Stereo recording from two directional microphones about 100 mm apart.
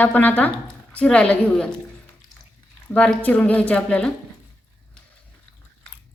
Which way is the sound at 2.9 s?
15° left (ahead or behind).